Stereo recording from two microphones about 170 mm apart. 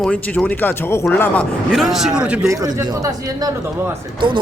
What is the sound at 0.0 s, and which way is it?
A man's voice, 10° left (ahead or behind).